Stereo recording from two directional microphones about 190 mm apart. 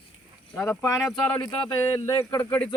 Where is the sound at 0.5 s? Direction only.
10° left (ahead or behind).